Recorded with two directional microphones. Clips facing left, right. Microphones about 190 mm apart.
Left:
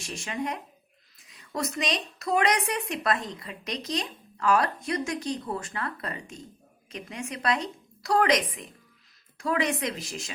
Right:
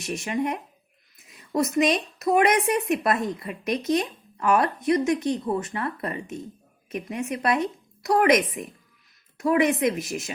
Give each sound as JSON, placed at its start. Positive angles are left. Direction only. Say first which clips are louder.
{"t": 0.0, "sound": "a woman's voice", "louder": "right 6 dB", "side_deg": -20}
{"t": 9.4, "sound": "speech", "louder": "right 7 dB", "side_deg": -20}